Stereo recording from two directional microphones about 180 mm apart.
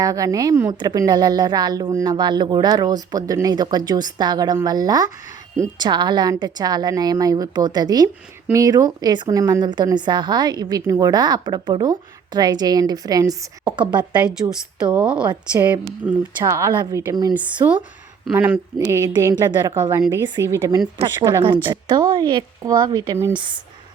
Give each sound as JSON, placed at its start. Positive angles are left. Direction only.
{"t": 0.0, "sound": "a woman's voice", "side_deg": -20}
{"t": 14.4, "sound": "a woman's voice", "side_deg": -20}
{"t": 15.6, "sound": "a woman's voice", "side_deg": -10}